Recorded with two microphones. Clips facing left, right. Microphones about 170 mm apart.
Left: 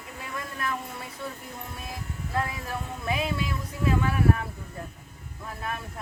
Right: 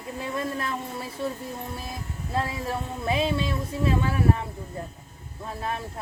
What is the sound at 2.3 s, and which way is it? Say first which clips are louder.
Speech: right 3 dB; 25° right (ahead or behind).